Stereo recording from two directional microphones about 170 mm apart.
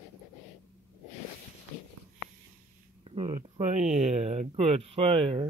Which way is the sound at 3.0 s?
35° right (ahead or behind).